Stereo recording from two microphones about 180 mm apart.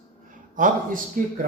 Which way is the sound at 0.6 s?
50° right (ahead or behind).